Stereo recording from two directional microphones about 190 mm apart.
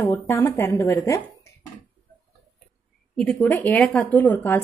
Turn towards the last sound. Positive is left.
turn(degrees=10)  # may be behind; listen again after turning